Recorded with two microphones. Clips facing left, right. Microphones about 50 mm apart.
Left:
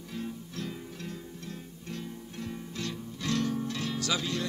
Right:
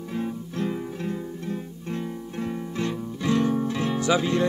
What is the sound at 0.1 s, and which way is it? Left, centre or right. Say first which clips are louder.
Music: right 8 dB; right.